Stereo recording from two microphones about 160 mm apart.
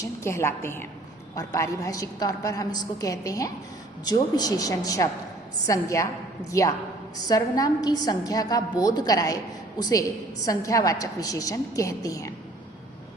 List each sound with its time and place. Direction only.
0.0 s a woman's voice: 15° left (ahead or behind)